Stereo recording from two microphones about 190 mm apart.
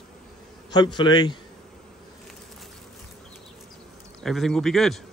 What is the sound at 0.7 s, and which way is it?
Speech, 25° left (ahead or behind).